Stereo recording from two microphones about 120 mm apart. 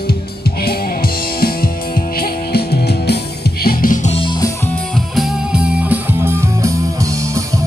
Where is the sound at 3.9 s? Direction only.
90° left.